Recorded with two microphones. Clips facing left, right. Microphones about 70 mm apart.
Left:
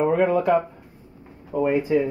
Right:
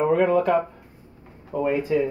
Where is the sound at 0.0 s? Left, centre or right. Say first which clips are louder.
Even; centre.